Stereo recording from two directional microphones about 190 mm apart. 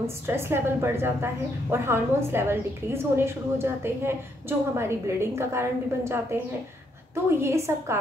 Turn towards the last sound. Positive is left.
turn(degrees=-15)  # may be behind; listen again after turning